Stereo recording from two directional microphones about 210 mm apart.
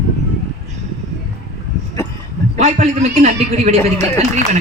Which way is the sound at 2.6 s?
35° right (ahead or behind).